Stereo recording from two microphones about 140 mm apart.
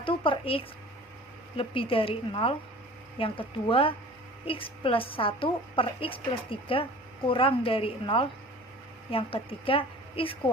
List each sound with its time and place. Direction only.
0.0 s a woman's voice: 40° left (ahead or behind)